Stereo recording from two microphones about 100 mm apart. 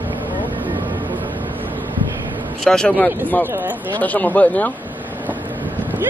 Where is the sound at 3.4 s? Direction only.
20° right (ahead or behind).